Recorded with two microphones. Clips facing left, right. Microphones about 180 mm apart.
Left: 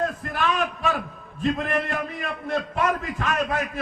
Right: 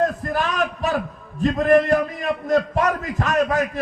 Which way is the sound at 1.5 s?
40° right (ahead or behind).